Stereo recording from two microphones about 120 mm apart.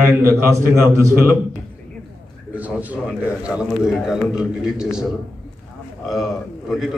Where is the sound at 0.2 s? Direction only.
25° right (ahead or behind).